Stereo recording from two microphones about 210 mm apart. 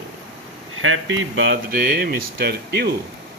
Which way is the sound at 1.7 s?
40° right (ahead or behind).